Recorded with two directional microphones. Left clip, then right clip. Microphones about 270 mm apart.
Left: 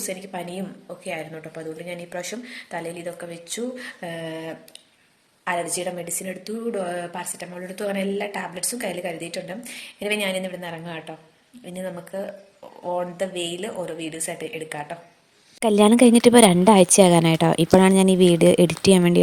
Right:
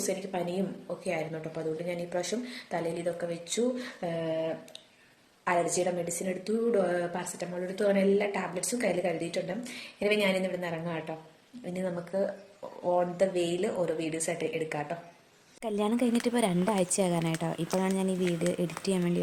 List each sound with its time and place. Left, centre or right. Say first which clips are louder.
0.0 s a woman's voice: left 1 dB; centre
15.6 s a woman's voice: left 14 dB; left